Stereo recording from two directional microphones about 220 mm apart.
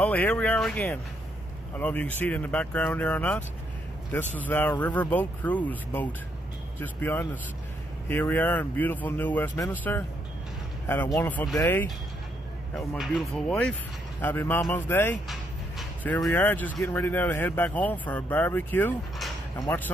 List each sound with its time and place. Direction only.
0.0 s speech: 5° left (ahead or behind)
12.7 s speech: centre (ahead or behind)
19.5 s speech: 15° left (ahead or behind)